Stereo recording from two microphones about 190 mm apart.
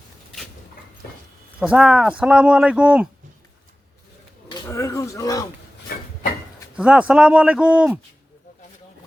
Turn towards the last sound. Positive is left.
turn(degrees=-5)  # may be behind; listen again after turning